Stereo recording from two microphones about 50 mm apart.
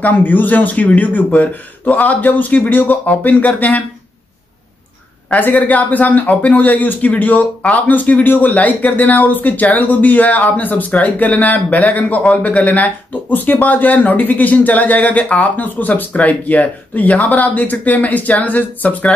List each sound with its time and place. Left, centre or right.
0.0 s speech: left
5.3 s speech: left